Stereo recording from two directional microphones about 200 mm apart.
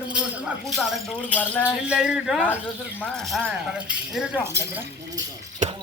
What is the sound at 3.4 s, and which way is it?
Speech, 10° right (ahead or behind).